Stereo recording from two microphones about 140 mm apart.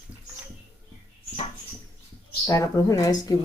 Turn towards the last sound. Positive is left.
turn(degrees=25)  # may be behind; listen again after turning